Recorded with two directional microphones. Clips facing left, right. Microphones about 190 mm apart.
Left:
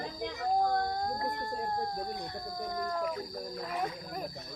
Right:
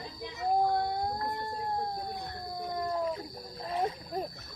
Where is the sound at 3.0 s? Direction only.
30° right (ahead or behind).